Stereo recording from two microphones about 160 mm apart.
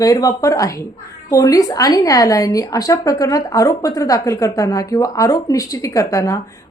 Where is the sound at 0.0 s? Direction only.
20° left (ahead or behind).